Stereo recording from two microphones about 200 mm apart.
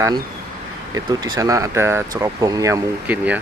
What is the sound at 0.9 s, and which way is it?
Speech, 20° right (ahead or behind).